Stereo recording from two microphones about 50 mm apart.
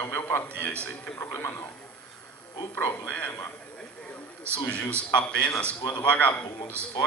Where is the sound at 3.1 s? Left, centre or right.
Left.